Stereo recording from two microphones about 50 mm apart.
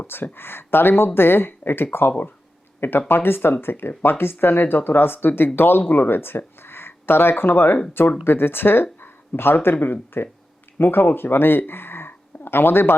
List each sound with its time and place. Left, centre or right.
0.1 s speech: left